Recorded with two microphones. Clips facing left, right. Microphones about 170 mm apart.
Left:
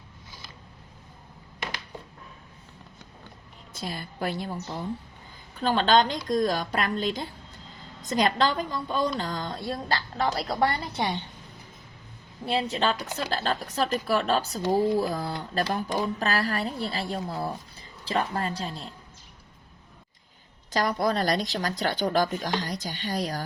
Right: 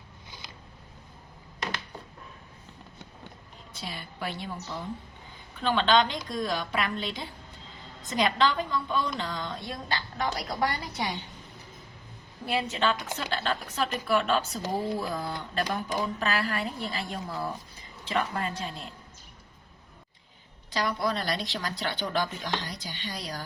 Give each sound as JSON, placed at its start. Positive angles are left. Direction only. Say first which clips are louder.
{"t": 0.3, "sound": "a sound", "louder": "right 1 dB", "side_deg": -20}
{"t": 3.8, "sound": "speech", "louder": "left 5 dB", "side_deg": 40}
{"t": 5.5, "sound": "a woman's voice", "louder": "left 2 dB", "side_deg": 40}
{"t": 12.5, "sound": "a woman's voice", "louder": "left 2 dB", "side_deg": 30}
{"t": 20.7, "sound": "speech", "louder": "left 4 dB", "side_deg": 45}